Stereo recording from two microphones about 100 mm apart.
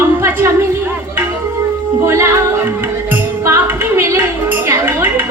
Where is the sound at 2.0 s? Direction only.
25° right (ahead or behind).